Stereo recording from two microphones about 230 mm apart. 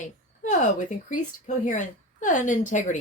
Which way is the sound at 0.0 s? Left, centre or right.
Left.